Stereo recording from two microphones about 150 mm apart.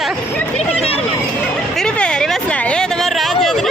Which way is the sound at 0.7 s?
40° left (ahead or behind).